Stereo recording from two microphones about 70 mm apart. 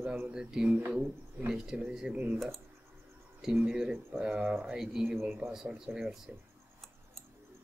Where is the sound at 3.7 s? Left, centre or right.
Centre.